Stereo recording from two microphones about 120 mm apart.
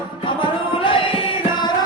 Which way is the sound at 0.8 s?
45° left (ahead or behind).